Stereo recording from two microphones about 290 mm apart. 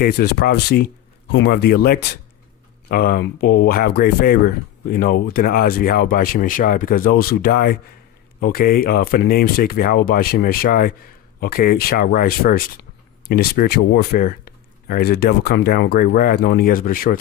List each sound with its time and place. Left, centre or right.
0.0 s speech: left